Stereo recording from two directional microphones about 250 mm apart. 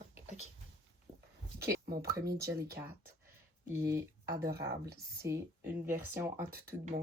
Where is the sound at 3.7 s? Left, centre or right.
Centre.